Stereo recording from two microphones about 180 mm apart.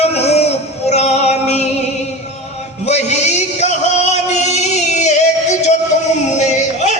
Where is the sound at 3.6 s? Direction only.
40° left (ahead or behind).